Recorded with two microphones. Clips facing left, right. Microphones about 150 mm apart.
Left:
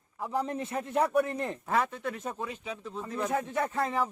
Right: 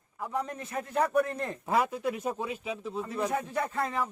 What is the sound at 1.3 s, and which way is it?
Speech, 20° left (ahead or behind).